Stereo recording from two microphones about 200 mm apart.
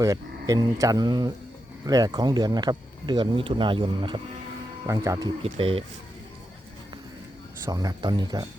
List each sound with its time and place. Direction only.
0.0 s speech: 15° right (ahead or behind)
4.9 s speech: 15° right (ahead or behind)
5.4 s speech: 30° right (ahead or behind)
7.6 s speech: 20° right (ahead or behind)